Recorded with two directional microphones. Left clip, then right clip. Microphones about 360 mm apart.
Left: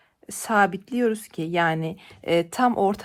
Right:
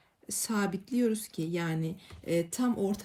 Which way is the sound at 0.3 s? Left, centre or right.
Centre.